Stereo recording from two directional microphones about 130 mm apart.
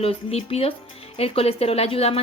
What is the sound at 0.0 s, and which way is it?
A woman's voice, 50° left (ahead or behind).